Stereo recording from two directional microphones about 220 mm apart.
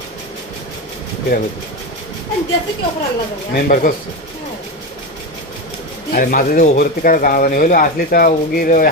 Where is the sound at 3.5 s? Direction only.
40° left (ahead or behind).